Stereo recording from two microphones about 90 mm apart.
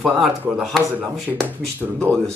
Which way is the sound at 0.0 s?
Centre (ahead or behind).